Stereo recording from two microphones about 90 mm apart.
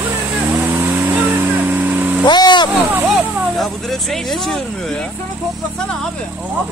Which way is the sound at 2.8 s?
20° right (ahead or behind).